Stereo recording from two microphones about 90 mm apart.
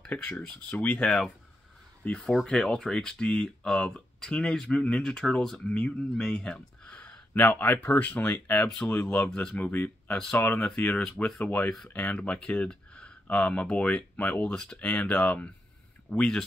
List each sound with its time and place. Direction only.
0.1 s speech: 15° left (ahead or behind)
9.7 s speech: 25° left (ahead or behind)